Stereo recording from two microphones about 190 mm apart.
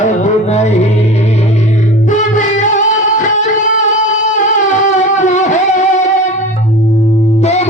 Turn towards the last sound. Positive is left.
turn(degrees=35)  # may be behind; listen again after turning